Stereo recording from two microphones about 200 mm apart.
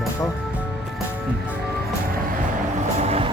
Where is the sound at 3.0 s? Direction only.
30° right (ahead or behind).